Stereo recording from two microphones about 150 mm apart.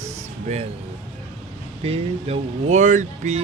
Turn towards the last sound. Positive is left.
turn(degrees=-50)  # may be behind; listen again after turning